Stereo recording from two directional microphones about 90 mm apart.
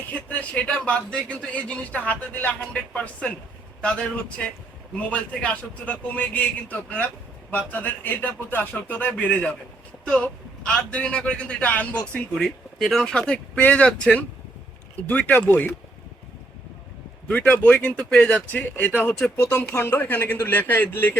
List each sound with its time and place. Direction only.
0.1 s a man's voice: 15° left (ahead or behind)
17.2 s a man's voice: 20° left (ahead or behind)
18.4 s a man's voice: 20° left (ahead or behind)